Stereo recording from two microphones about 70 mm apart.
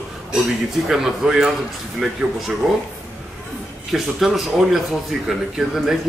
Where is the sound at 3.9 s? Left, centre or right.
Centre.